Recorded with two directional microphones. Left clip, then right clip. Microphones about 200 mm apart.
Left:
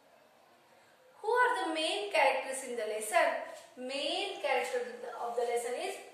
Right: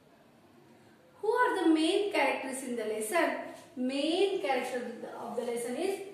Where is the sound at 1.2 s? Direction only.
10° left (ahead or behind).